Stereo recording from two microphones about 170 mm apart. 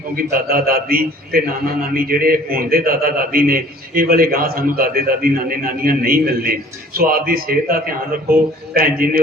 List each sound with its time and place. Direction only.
0.2 s a man's voice: 60° right (ahead or behind)